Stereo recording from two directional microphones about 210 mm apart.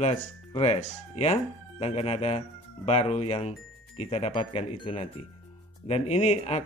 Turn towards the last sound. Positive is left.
turn(degrees=30)  # may be behind; listen again after turning